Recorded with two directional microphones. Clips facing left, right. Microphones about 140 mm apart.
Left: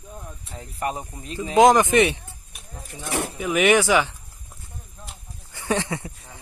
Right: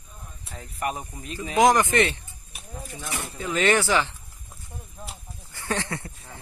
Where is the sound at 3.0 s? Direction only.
65° left (ahead or behind).